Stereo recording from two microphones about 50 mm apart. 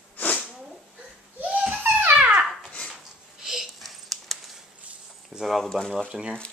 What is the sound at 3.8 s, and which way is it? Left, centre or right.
Dog, centre.